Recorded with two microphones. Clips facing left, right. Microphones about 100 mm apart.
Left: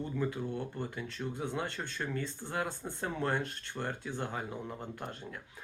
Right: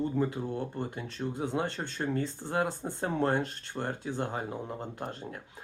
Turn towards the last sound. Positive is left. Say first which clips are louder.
# right 3 dB
turn(degrees=-20)  # may be behind; listen again after turning